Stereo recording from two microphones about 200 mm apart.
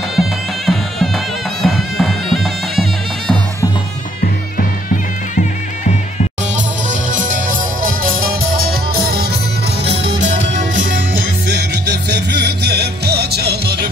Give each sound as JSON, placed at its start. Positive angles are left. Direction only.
{"t": 0.1, "sound": "music", "side_deg": 0}
{"t": 6.5, "sound": "music", "side_deg": -40}
{"t": 10.2, "sound": "music", "side_deg": -40}